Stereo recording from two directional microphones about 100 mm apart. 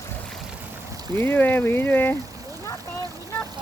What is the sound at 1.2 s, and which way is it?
Speech, 20° left (ahead or behind).